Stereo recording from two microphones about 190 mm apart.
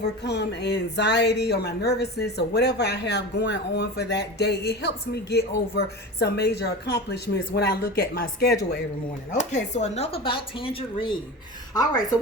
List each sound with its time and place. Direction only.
0.0 s speech: 60° left (ahead or behind)
9.3 s speech: 40° left (ahead or behind)